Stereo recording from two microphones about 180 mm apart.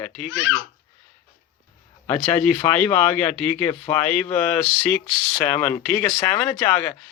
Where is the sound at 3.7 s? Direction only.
5° left (ahead or behind).